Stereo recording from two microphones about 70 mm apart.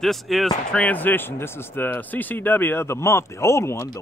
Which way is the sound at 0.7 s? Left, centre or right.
Centre.